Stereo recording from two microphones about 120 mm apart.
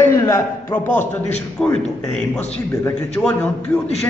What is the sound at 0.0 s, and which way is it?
A man's voice, 20° left (ahead or behind).